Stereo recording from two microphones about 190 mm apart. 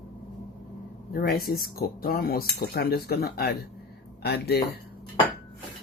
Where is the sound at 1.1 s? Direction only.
55° left (ahead or behind).